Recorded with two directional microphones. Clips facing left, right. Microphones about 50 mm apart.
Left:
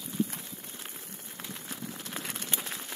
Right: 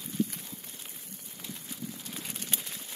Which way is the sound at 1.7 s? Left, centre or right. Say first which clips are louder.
Left 2 dB; left.